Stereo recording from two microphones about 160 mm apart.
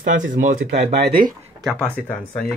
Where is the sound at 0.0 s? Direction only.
55° right (ahead or behind).